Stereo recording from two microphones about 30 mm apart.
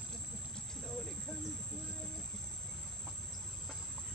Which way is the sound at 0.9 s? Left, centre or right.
Centre.